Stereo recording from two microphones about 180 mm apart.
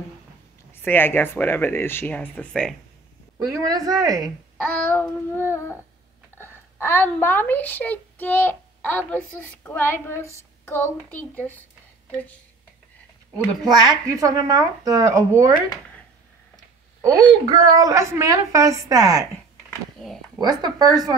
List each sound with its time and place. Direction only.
0.8 s speech: 10° left (ahead or behind)
3.4 s speech: 20° right (ahead or behind)
4.6 s speech: 5° left (ahead or behind)
13.7 s speech: 20° right (ahead or behind)
17.5 s speech: 20° right (ahead or behind)
20.0 s speech: centre (ahead or behind)
20.3 s speech: 25° right (ahead or behind)